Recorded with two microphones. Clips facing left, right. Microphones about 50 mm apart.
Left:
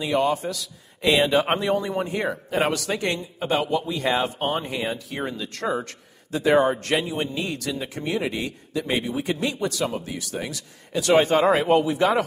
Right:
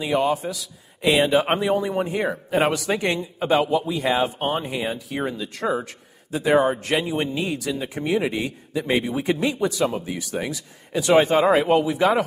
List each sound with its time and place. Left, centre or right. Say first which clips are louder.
0.0 s speech: right 1 dB; centre
2.7 s speech: right 2 dB; centre